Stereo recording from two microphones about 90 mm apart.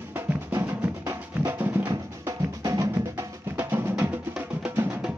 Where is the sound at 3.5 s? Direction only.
25° right (ahead or behind).